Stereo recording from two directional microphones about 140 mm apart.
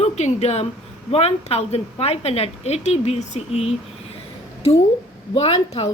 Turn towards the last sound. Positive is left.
turn(degrees=50)  # may be behind; listen again after turning